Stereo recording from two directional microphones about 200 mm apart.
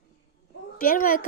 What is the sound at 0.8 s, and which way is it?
Speech, 45° left (ahead or behind).